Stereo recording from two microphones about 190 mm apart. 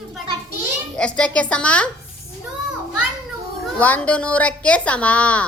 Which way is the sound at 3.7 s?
10° left (ahead or behind).